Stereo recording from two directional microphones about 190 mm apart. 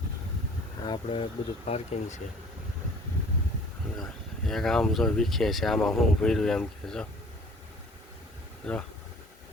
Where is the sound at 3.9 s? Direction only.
Centre (ahead or behind).